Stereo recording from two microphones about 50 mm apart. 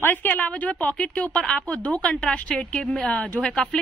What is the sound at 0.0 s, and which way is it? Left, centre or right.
A woman's voice, left.